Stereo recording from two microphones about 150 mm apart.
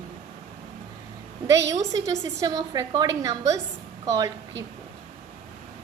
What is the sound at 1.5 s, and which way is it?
A woman's voice, 20° right (ahead or behind).